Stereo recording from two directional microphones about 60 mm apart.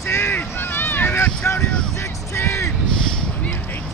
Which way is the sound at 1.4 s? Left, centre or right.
Left.